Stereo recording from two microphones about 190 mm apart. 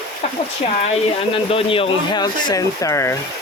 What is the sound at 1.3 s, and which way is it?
Speech, 30° left (ahead or behind).